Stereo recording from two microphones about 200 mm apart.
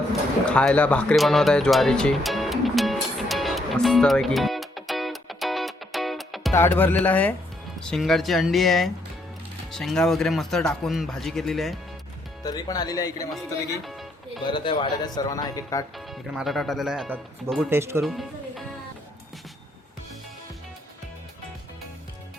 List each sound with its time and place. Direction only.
0.4 s music: 5° left (ahead or behind)
6.5 s speech: 10° left (ahead or behind)
12.4 s speech: 20° left (ahead or behind)
13.3 s music: centre (ahead or behind)
14.4 s speech: 25° left (ahead or behind)
16.0 s speech: centre (ahead or behind)
18.0 s speech: centre (ahead or behind)